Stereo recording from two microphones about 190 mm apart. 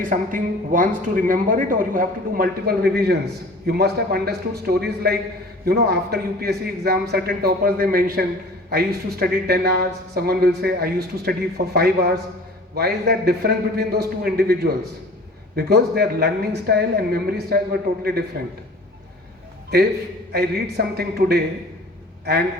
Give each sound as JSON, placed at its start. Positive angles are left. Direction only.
{"t": 0.0, "sound": "speech", "side_deg": -45}
{"t": 20.3, "sound": "speech", "side_deg": -55}